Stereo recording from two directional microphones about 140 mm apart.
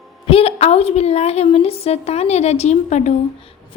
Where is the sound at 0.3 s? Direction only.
45° left (ahead or behind).